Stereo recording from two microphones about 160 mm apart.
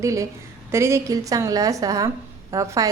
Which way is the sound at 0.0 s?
20° right (ahead or behind).